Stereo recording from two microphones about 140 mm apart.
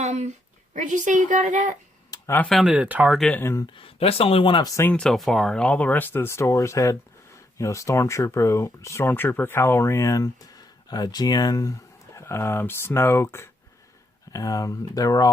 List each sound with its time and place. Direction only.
0.0 s a sound: 55° right (ahead or behind)
0.8 s a woman's voice: 60° right (ahead or behind)
2.0 s a sound: 25° left (ahead or behind)
2.4 s speech: centre (ahead or behind)
2.6 s speech: 10° right (ahead or behind); by 3.7 s 20° left (ahead or behind)
3.8 s speech: 40° left (ahead or behind); by 4.9 s 25° left (ahead or behind)
4.9 s speech: 5° left (ahead or behind); by 15.3 s 25° left (ahead or behind)